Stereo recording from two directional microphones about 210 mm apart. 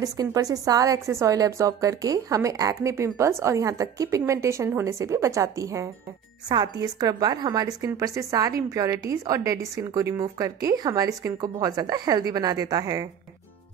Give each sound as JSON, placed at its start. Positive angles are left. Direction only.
{"t": 0.0, "sound": "a woman's voice", "side_deg": -15}